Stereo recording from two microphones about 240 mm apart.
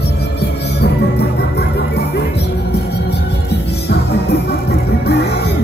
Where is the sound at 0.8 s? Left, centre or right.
Left.